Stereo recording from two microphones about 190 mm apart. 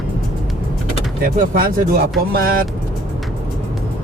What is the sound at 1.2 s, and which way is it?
Speech, 50° right (ahead or behind).